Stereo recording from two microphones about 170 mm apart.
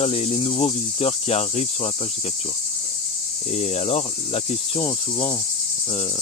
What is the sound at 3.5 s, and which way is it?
Cricket, 40° left (ahead or behind).